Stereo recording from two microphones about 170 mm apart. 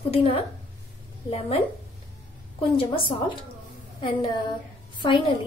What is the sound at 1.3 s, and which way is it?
Speech, 35° left (ahead or behind).